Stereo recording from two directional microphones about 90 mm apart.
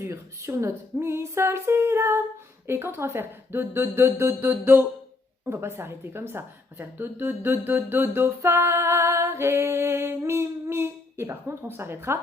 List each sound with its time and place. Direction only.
0.0 s a woman's voice: 30° right (ahead or behind)